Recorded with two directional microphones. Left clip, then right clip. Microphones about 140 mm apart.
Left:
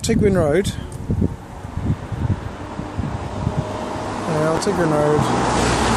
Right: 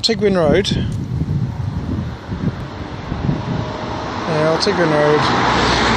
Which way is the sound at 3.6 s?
15° right (ahead or behind).